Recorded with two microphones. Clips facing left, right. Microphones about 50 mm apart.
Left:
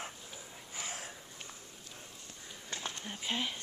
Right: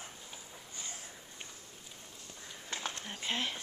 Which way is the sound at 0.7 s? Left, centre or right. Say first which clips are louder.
Left 6 dB; left.